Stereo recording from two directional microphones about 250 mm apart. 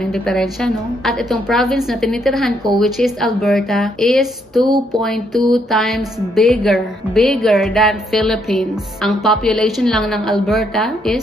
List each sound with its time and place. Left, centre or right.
0.0 s speech: centre